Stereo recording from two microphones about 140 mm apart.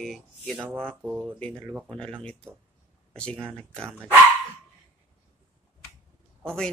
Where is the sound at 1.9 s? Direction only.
5° left (ahead or behind).